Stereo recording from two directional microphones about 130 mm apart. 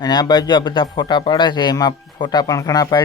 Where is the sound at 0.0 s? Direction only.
30° left (ahead or behind).